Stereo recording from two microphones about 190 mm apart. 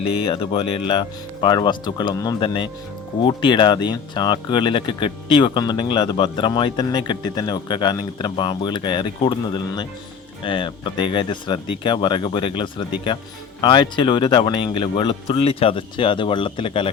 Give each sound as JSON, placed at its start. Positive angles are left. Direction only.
{"t": 0.3, "sound": "speech", "side_deg": 30}